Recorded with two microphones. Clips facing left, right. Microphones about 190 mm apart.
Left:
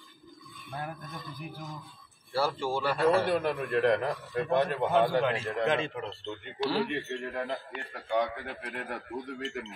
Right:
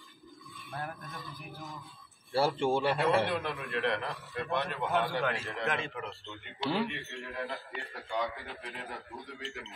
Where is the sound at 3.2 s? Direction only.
40° left (ahead or behind).